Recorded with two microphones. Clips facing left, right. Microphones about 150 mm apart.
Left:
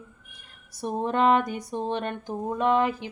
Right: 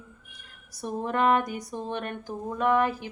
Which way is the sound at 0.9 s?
25° left (ahead or behind).